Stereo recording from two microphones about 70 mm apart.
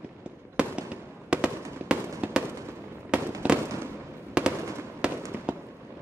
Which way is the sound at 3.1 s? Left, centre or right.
Centre.